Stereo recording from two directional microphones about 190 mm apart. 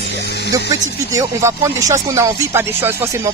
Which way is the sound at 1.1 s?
15° right (ahead or behind).